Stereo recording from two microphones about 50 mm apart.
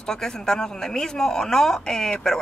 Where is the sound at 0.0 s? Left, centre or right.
Centre.